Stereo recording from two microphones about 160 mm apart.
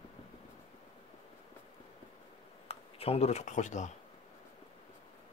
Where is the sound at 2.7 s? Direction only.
40° left (ahead or behind).